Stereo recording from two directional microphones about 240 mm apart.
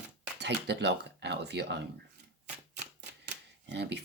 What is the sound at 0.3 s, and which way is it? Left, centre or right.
Speech, right.